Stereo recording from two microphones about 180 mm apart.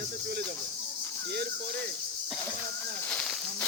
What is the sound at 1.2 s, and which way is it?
Speech, 65° right (ahead or behind).